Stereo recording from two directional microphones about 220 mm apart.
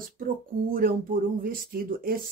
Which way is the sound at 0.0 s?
40° right (ahead or behind).